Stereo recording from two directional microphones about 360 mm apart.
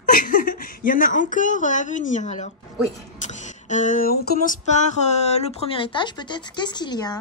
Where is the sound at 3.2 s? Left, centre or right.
Centre.